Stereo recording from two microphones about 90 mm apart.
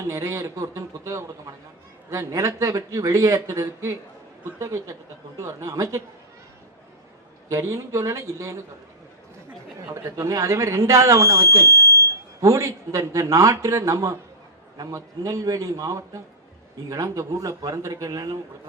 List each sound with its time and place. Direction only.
0.0 s a man's voice: 30° right (ahead or behind)
7.5 s a man's voice: 35° right (ahead or behind)
9.9 s a man's voice: 35° right (ahead or behind)